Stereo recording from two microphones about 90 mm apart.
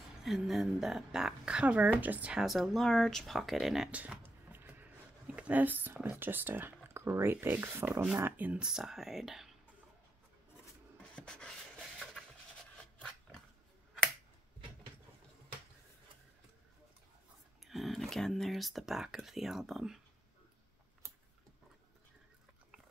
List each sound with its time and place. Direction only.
0.2 s a woman's voice: 5° right (ahead or behind)
2.4 s speech: centre (ahead or behind)
3.9 s a sound: 15° right (ahead or behind)
5.2 s speech: 15° right (ahead or behind)
8.6 s speech: 5° right (ahead or behind)
11.1 s a sound: 10° left (ahead or behind)
17.6 s speech: centre (ahead or behind)